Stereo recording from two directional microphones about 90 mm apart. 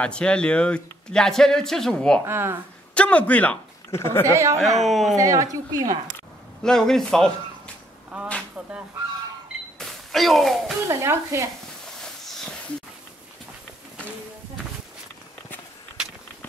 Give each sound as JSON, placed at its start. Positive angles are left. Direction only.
{"t": 0.0, "sound": "speech", "side_deg": 10}
{"t": 2.2, "sound": "speech", "side_deg": -25}
{"t": 2.9, "sound": "speech", "side_deg": 15}
{"t": 3.9, "sound": "a woman's voice", "side_deg": 30}
{"t": 4.3, "sound": "a woman's voice", "side_deg": -35}
{"t": 4.8, "sound": "speech", "side_deg": 0}
{"t": 5.1, "sound": "a woman's voice", "side_deg": -40}
{"t": 6.6, "sound": "speech", "side_deg": 5}
{"t": 8.1, "sound": "speech", "side_deg": -15}
{"t": 9.8, "sound": "a sound", "side_deg": 0}
{"t": 10.9, "sound": "a woman's voice", "side_deg": -35}
{"t": 11.8, "sound": "a sound", "side_deg": 5}